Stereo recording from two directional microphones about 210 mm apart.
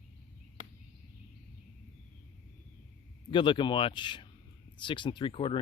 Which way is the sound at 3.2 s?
25° left (ahead or behind).